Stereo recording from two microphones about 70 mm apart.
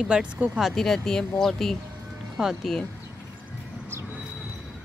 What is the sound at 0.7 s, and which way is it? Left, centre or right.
Speech, centre.